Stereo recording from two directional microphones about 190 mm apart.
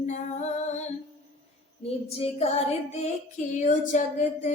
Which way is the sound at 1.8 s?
30° left (ahead or behind).